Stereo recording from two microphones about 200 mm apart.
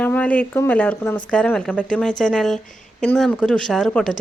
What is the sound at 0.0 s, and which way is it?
A woman's voice, 10° left (ahead or behind).